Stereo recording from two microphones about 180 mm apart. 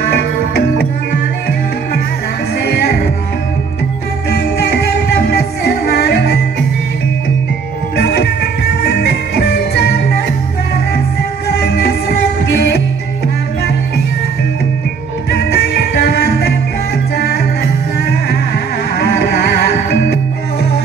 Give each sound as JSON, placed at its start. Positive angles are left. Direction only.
{"t": 0.1, "sound": "music", "side_deg": 60}
{"t": 4.3, "sound": "music", "side_deg": 55}
{"t": 8.0, "sound": "music", "side_deg": 60}
{"t": 11.6, "sound": "music", "side_deg": 60}
{"t": 15.3, "sound": "music", "side_deg": 60}
{"t": 18.9, "sound": "music", "side_deg": 60}